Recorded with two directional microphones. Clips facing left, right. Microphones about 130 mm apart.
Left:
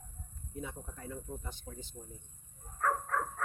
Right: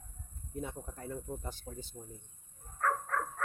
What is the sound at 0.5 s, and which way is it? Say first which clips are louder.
Speech: right 2 dB; 45° right (ahead or behind).